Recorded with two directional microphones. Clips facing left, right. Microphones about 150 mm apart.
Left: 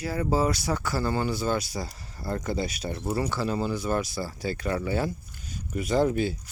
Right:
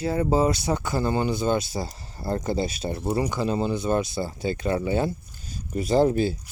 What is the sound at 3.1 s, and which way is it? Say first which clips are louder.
Speech: right 2 dB; 20° right (ahead or behind).